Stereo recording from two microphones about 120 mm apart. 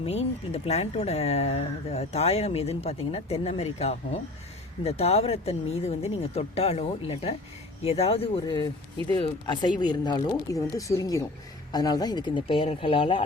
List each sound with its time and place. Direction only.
0.0 s speech: 55° left (ahead or behind)